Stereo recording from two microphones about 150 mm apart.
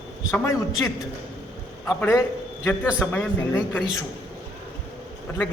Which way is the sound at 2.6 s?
10° left (ahead or behind).